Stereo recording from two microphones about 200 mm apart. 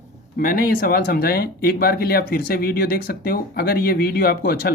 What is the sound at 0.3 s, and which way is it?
Speech, 50° left (ahead or behind).